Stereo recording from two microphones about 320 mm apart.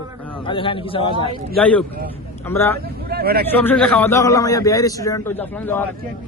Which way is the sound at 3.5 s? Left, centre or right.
Centre.